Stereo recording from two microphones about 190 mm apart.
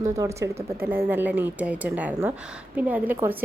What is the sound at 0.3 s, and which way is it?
A woman's voice, 15° right (ahead or behind).